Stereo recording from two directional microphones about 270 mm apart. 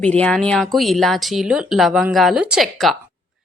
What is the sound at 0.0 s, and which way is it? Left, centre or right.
A woman's voice, centre.